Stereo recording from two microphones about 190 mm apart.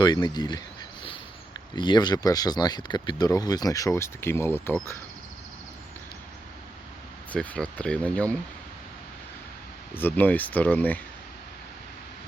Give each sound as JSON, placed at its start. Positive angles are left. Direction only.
{"t": 0.0, "sound": "speech", "side_deg": 20}
{"t": 1.7, "sound": "speech", "side_deg": 25}
{"t": 7.3, "sound": "speech", "side_deg": 5}
{"t": 9.9, "sound": "speech", "side_deg": 10}